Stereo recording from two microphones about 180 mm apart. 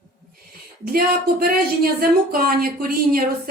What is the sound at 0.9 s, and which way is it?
Speech, 55° right (ahead or behind).